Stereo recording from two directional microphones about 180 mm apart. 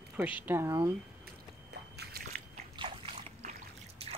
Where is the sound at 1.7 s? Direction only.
65° right (ahead or behind).